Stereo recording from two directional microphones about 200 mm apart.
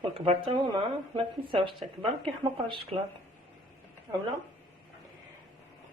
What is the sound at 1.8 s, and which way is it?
Speech, centre (ahead or behind).